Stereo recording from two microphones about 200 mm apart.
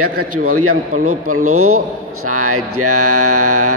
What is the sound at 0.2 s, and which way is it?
Mantra, 90° right.